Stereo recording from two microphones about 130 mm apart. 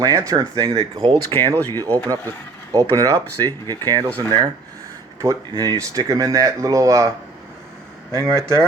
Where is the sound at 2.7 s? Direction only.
25° right (ahead or behind).